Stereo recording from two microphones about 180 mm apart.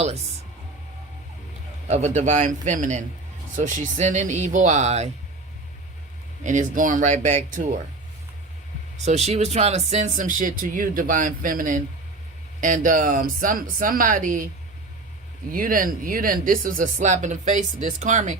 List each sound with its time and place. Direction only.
1.9 s speech: 40° right (ahead or behind)
6.4 s speech: 45° right (ahead or behind)
9.0 s speech: 35° right (ahead or behind)
15.5 s speech: 50° right (ahead or behind)